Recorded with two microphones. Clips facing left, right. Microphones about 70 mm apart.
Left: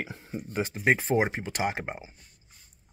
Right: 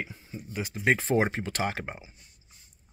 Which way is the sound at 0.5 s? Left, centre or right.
Left.